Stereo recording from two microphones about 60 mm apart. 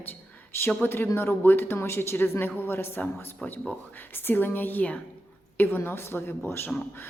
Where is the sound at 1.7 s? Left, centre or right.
Left.